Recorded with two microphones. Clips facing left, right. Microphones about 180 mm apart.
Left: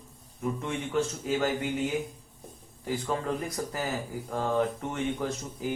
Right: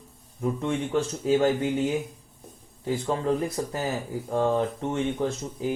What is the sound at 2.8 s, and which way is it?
Speech, 25° right (ahead or behind).